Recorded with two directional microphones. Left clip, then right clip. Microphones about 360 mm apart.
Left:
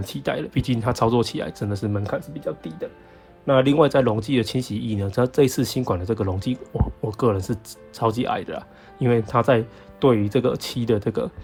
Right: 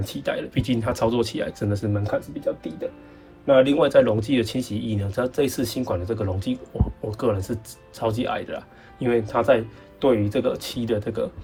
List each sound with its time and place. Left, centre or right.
0.0 s speech: centre
3.4 s speech: centre